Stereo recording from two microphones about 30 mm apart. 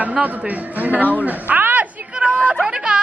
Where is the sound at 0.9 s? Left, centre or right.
Right.